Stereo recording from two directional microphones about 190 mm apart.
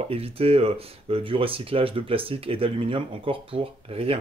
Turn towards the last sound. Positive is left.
turn(degrees=-30)  # may be behind; listen again after turning